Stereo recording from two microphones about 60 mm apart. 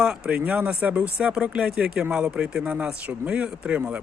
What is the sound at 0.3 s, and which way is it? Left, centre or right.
Speech, right.